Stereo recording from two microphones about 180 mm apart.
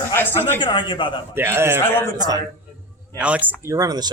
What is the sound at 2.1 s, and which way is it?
Speech, 20° right (ahead or behind).